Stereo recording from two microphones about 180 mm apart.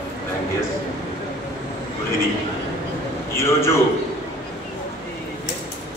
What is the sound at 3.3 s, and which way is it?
Speech, 15° left (ahead or behind).